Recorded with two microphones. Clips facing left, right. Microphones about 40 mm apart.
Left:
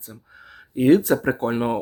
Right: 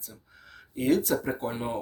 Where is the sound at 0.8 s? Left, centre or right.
Left.